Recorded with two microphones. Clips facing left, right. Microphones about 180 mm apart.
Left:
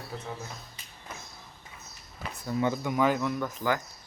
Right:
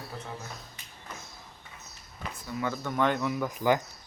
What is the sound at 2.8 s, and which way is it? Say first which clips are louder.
Speech: left 1 dB; 5° left (ahead or behind).